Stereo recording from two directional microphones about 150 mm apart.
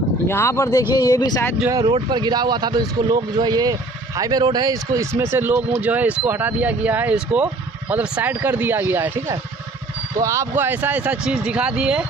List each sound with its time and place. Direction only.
0.3 s speech: 15° left (ahead or behind)
1.7 s speech: 30° right (ahead or behind); by 12.1 s 5° right (ahead or behind)